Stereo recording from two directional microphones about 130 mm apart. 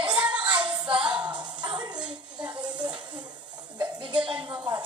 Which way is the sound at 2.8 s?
35° right (ahead or behind).